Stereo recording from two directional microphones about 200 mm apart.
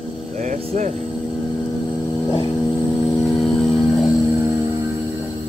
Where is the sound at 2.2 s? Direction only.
20° left (ahead or behind).